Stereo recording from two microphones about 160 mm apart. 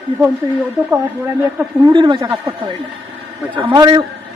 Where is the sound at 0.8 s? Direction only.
15° right (ahead or behind).